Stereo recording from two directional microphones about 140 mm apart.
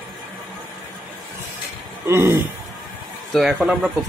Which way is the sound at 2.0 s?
20° right (ahead or behind).